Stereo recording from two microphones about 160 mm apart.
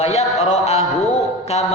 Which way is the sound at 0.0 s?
45° left (ahead or behind).